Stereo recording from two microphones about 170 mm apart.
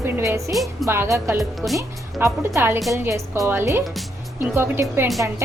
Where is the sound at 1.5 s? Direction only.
Centre (ahead or behind).